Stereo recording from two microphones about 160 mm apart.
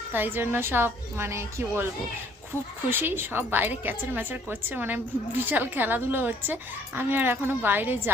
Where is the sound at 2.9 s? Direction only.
15° right (ahead or behind).